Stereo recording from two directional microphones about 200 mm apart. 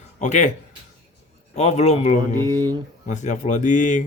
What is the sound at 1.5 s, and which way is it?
Speech, 35° left (ahead or behind).